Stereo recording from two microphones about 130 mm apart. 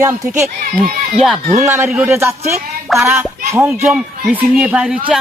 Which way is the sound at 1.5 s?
20° right (ahead or behind).